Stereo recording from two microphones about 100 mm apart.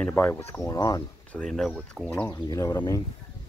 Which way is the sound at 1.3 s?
5° left (ahead or behind).